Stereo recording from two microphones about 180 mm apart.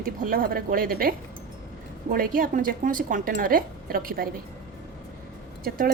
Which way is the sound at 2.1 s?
50° right (ahead or behind).